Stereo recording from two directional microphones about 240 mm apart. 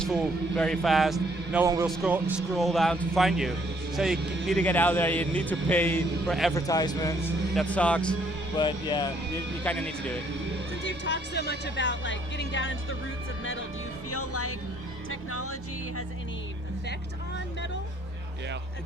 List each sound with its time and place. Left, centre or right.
0.0 s a man's voice: centre
1.6 s a man's voice: centre
6.5 s a man's voice: centre
7.5 s a man's voice: centre
8.5 s speech: centre
9.6 s a man's voice: centre
10.8 s speech: left
14.1 s speech: left